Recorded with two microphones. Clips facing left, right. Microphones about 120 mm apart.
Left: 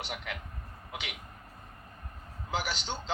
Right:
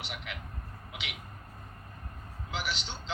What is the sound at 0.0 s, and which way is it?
Speech, 40° left (ahead or behind).